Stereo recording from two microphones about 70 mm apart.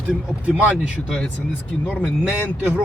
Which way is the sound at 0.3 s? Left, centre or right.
Centre.